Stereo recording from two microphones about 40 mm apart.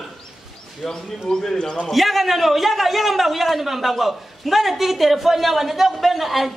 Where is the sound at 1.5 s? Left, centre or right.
Centre.